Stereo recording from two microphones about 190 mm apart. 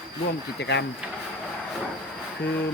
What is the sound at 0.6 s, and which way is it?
Speech, 65° left (ahead or behind).